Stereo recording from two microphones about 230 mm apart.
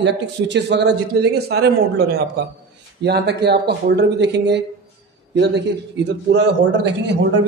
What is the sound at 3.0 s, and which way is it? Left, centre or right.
Speech, right.